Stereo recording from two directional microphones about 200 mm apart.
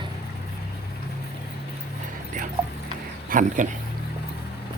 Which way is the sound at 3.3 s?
40° right (ahead or behind).